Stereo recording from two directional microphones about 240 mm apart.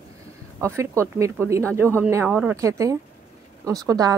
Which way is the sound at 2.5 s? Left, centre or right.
Centre.